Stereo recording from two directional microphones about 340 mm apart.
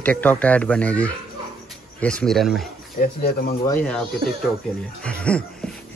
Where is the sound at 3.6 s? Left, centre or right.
Centre.